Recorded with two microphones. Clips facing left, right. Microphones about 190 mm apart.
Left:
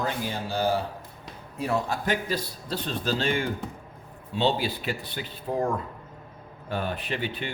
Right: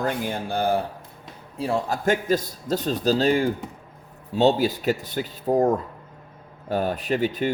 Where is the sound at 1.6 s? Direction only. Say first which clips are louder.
Right 3 dB; 30° right (ahead or behind).